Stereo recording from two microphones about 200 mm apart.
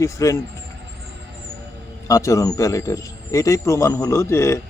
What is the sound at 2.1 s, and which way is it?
Speech, 15° left (ahead or behind).